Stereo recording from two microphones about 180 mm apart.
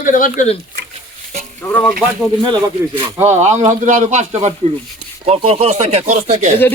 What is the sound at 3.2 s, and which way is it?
Speech, 15° right (ahead or behind).